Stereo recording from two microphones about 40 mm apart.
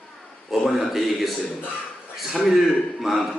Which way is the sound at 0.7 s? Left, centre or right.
Centre.